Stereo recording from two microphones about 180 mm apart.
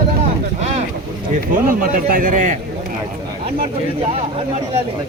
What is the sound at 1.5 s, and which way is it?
A man's voice, 50° right (ahead or behind).